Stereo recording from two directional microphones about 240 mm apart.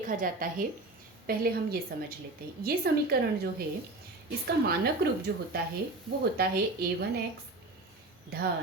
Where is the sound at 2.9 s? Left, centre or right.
Right.